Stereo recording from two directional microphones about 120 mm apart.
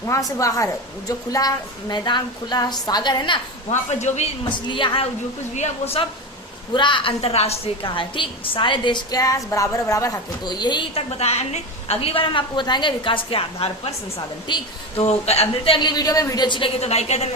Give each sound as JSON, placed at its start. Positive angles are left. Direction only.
{"t": 0.0, "sound": "a woman's voice", "side_deg": 25}
{"t": 3.7, "sound": "speech", "side_deg": 70}
{"t": 4.4, "sound": "a woman's voice", "side_deg": 40}
{"t": 5.5, "sound": "speech", "side_deg": 60}
{"t": 6.7, "sound": "a woman's voice", "side_deg": 45}
{"t": 10.9, "sound": "a woman's voice", "side_deg": 65}
{"t": 15.0, "sound": "a woman's voice", "side_deg": 60}